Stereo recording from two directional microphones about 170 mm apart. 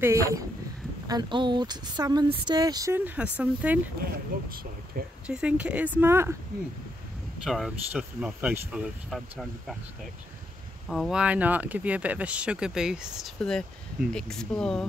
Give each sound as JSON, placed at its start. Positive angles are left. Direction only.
{"t": 0.0, "sound": "speech", "side_deg": -20}
{"t": 3.2, "sound": "speech", "side_deg": -10}
{"t": 4.0, "sound": "speech", "side_deg": -60}
{"t": 5.2, "sound": "speech", "side_deg": -5}
{"t": 7.4, "sound": "speech", "side_deg": 0}
{"t": 10.9, "sound": "speech", "side_deg": 0}